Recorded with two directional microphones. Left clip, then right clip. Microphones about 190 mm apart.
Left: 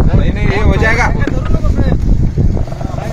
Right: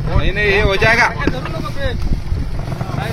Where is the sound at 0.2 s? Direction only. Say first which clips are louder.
Right 3 dB; 65° left (ahead or behind).